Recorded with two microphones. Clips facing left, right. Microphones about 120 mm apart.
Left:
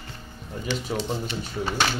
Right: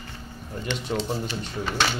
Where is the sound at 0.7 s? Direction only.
5° left (ahead or behind).